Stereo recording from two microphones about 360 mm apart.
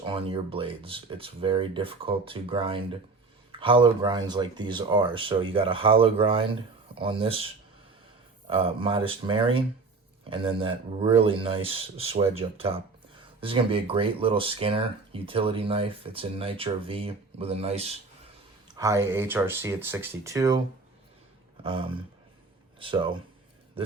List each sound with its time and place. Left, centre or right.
0.0 s speech: centre
8.4 s speech: centre
21.6 s speech: centre